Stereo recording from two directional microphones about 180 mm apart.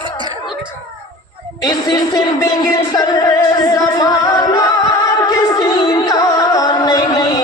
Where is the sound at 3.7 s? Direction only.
20° left (ahead or behind).